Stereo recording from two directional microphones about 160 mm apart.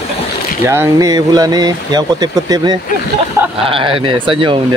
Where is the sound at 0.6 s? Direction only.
15° right (ahead or behind).